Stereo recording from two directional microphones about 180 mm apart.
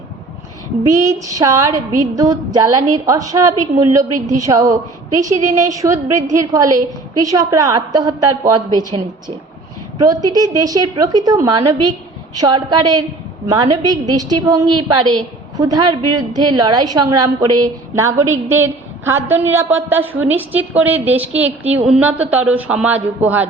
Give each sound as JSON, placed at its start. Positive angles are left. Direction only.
{"t": 0.8, "sound": "a woman's voice", "side_deg": -20}
{"t": 1.7, "sound": "a woman's voice", "side_deg": -45}
{"t": 2.1, "sound": "a woman's voice", "side_deg": -20}
{"t": 10.0, "sound": "a woman's voice", "side_deg": -20}